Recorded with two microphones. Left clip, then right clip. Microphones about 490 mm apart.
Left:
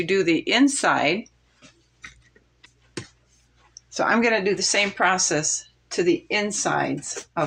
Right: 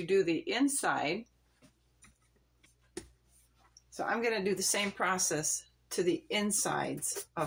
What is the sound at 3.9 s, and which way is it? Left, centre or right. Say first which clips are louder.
Speech: left 12 dB; right.